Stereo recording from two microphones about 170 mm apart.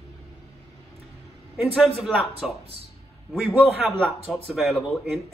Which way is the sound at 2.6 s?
35° right (ahead or behind).